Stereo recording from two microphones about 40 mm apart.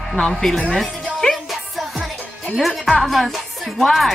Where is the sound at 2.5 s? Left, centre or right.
Centre.